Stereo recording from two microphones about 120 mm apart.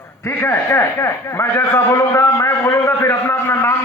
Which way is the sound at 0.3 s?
20° left (ahead or behind).